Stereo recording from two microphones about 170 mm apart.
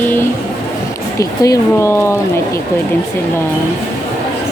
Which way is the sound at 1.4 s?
15° left (ahead or behind).